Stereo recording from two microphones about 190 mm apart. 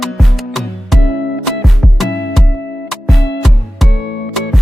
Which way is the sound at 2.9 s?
Centre (ahead or behind).